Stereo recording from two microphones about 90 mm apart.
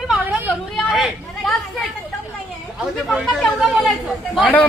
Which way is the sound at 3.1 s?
Centre (ahead or behind).